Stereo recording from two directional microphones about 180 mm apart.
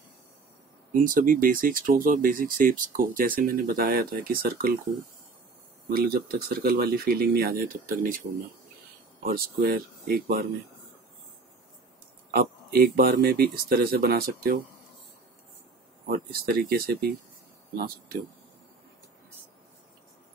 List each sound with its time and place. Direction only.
0.9 s speech: 50° right (ahead or behind)
5.9 s speech: 55° right (ahead or behind)
12.3 s speech: 55° right (ahead or behind)
16.1 s speech: 55° right (ahead or behind)